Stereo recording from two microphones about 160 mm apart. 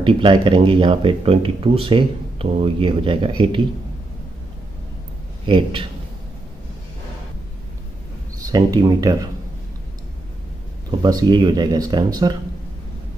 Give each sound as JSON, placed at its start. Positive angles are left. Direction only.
{"t": 0.0, "sound": "speech", "side_deg": -30}
{"t": 5.5, "sound": "speech", "side_deg": -35}
{"t": 8.5, "sound": "speech", "side_deg": -25}
{"t": 10.9, "sound": "speech", "side_deg": -25}